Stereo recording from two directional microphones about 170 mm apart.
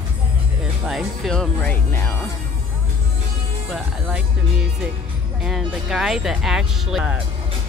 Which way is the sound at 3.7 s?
5° right (ahead or behind).